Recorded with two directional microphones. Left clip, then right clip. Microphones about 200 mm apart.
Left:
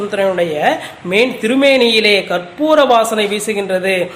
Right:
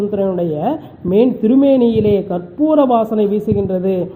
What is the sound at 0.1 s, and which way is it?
Speech, 30° left (ahead or behind).